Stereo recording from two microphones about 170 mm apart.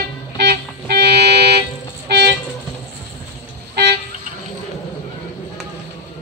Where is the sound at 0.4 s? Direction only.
80° right.